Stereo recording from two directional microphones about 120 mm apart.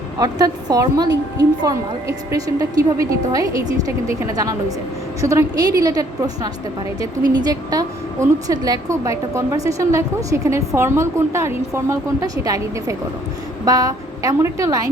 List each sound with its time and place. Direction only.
0.2 s a woman's voice: 30° right (ahead or behind)